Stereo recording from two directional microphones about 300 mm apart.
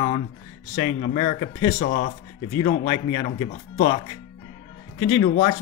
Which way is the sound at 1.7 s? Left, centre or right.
Left.